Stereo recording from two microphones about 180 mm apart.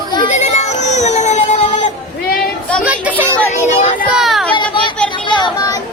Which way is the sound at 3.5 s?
40° left (ahead or behind).